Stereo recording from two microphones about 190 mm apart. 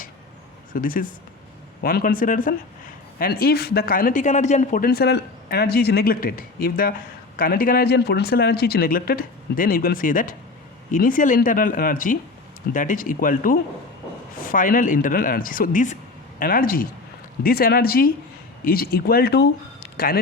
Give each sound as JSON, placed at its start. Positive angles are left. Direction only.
{"t": 0.7, "sound": "speech", "side_deg": 45}